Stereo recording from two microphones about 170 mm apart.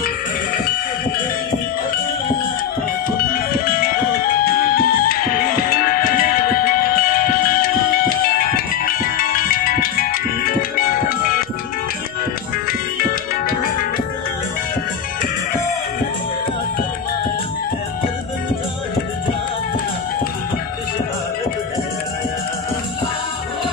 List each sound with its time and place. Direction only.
3.2 s music: 60° left (ahead or behind)
12.6 s music: 55° left (ahead or behind)